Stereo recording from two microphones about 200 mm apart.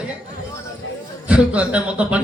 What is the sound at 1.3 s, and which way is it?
Speech, 5° right (ahead or behind).